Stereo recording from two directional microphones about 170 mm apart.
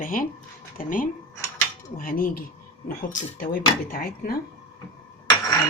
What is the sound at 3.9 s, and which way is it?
Speech, 60° left (ahead or behind).